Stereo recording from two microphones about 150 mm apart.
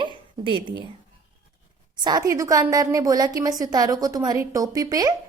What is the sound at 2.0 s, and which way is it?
A woman's voice, 25° right (ahead or behind).